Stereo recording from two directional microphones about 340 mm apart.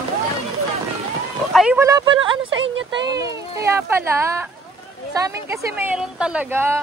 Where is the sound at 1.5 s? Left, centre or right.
Centre.